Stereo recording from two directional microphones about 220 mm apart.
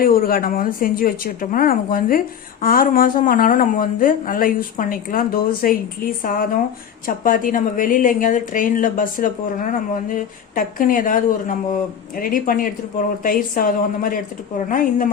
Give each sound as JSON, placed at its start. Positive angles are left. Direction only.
{"t": 0.0, "sound": "a woman's voice", "side_deg": 40}